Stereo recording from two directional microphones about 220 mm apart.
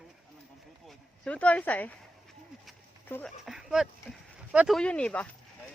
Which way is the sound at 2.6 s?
5° left (ahead or behind).